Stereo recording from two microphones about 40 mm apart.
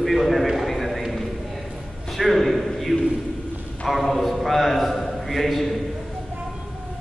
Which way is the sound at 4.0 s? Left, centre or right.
Centre.